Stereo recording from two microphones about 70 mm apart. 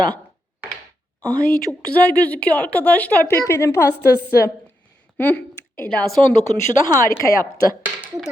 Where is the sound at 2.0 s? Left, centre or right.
Left.